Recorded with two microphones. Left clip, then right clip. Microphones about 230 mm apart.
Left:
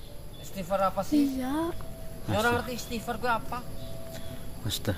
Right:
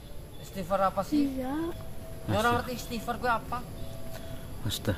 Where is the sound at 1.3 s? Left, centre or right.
Left.